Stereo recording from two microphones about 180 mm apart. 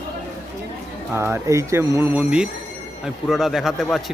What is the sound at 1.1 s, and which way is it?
Speech, 15° right (ahead or behind).